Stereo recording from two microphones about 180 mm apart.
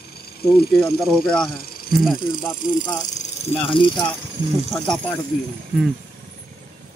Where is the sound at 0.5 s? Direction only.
Centre (ahead or behind).